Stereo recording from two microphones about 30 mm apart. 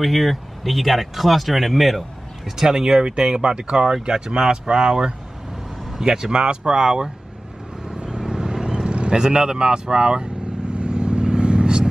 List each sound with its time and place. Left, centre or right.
0.0 s speech: centre
2.7 s speech: right
7.8 s vehicle: right
8.2 s vehicle: centre